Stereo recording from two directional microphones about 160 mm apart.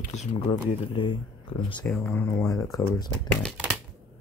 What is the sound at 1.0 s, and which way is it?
Speech, 30° left (ahead or behind).